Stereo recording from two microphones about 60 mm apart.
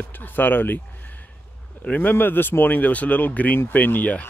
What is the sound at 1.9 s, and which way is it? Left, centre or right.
Speech, left.